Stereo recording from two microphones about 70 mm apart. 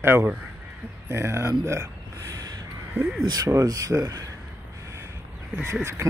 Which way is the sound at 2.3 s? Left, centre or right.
Right.